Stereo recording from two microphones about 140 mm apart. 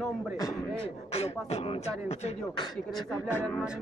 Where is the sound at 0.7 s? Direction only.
45° left (ahead or behind).